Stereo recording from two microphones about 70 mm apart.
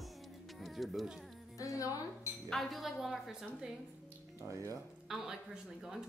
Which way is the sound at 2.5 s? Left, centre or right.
Centre.